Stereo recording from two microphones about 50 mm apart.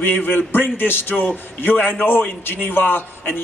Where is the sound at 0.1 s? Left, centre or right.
Left.